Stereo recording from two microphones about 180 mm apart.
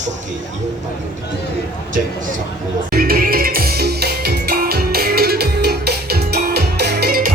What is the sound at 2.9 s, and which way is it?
Music, 55° right (ahead or behind).